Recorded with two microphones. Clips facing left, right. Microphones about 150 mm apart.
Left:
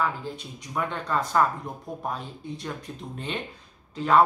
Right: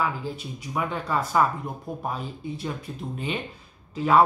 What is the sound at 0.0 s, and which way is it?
Speech, 5° right (ahead or behind).